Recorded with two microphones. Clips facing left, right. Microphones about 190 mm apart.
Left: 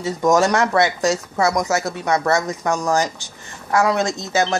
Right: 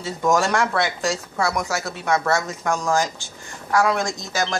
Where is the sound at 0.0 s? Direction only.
20° left (ahead or behind).